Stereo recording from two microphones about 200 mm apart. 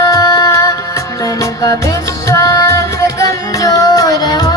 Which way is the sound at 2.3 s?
15° left (ahead or behind).